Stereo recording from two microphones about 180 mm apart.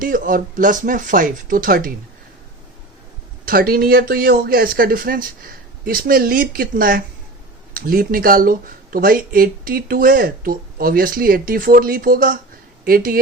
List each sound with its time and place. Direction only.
0.0 s speech: 50° right (ahead or behind)
3.4 s speech: 55° right (ahead or behind)